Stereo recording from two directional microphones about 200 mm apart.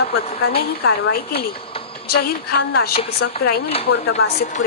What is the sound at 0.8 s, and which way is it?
Speech, 50° left (ahead or behind).